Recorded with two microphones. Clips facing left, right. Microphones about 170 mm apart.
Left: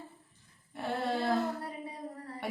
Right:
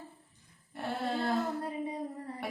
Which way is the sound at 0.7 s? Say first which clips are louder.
Left 1 dB; centre (ahead or behind).